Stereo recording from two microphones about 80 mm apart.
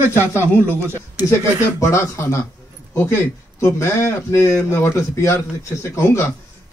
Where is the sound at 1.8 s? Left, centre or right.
Left.